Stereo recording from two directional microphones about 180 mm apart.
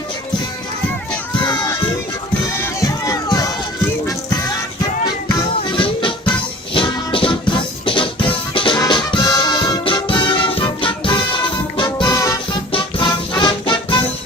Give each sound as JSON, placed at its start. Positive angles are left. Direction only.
{"t": 1.4, "sound": "crowd", "side_deg": 20}
{"t": 5.7, "sound": "music", "side_deg": 30}